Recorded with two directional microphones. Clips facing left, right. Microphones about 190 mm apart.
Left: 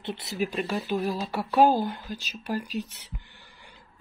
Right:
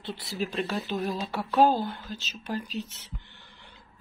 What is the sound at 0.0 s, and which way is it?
Speech, 20° left (ahead or behind).